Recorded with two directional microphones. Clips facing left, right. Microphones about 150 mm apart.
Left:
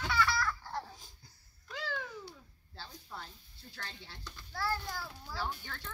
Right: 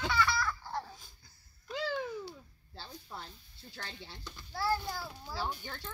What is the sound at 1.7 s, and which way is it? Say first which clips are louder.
Babbling: right 5 dB; 15° right (ahead or behind).